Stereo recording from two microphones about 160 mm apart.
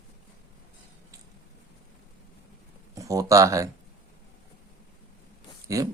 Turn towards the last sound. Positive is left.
turn(degrees=-20)  # may be behind; listen again after turning